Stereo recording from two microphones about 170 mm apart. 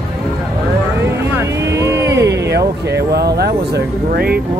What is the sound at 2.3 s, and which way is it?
Speech, 85° right.